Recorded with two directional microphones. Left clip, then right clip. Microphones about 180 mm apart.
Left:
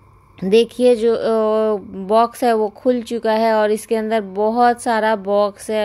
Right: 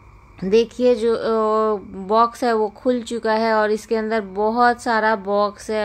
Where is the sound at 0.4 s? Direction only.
25° left (ahead or behind).